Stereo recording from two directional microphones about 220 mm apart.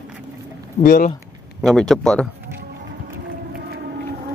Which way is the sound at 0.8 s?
40° left (ahead or behind).